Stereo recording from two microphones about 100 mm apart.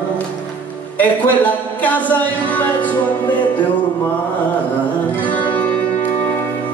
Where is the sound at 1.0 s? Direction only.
15° left (ahead or behind).